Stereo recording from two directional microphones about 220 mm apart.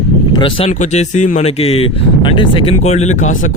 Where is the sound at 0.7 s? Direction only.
35° left (ahead or behind).